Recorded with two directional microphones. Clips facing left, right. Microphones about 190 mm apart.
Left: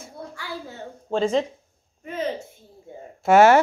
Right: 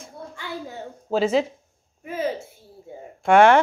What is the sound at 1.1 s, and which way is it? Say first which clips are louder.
A woman's voice: right 1 dB; 5° right (ahead or behind).